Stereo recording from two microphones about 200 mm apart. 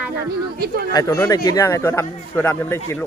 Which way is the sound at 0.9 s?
15° left (ahead or behind).